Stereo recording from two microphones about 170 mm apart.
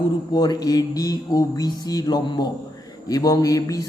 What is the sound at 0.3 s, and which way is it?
Speech, 25° left (ahead or behind).